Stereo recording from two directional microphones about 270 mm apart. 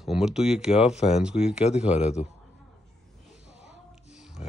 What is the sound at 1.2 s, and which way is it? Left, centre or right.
Speech, centre.